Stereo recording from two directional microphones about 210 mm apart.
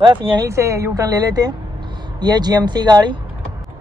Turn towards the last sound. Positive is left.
turn(degrees=-20)  # may be behind; listen again after turning